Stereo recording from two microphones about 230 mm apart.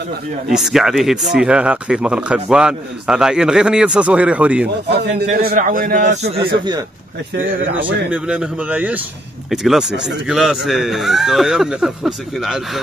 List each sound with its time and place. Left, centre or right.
0.5 s speech: centre
4.8 s a man's voice: right
8.1 s speech: centre